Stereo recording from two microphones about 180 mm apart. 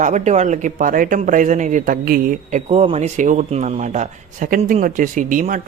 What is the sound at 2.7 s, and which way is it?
Speech, 35° right (ahead or behind).